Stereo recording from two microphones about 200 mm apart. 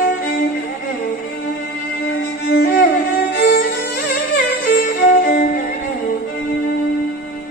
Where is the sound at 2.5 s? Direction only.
60° left (ahead or behind).